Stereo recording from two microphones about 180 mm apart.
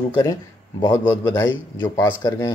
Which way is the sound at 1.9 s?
20° left (ahead or behind).